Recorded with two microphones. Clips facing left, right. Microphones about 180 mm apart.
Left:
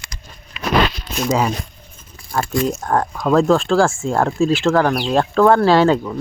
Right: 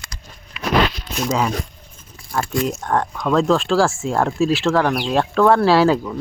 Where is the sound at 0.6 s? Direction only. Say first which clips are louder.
Left 1 dB; 20° left (ahead or behind).